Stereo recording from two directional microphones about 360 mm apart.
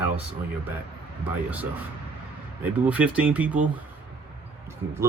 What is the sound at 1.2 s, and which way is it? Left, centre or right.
Speech, centre.